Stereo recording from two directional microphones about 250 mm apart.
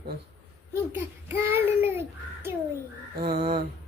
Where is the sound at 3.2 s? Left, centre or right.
Right.